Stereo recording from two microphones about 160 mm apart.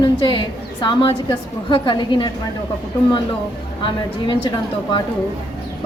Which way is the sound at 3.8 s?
30° left (ahead or behind).